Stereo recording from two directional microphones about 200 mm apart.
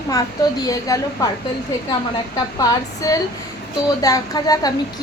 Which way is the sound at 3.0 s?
15° left (ahead or behind).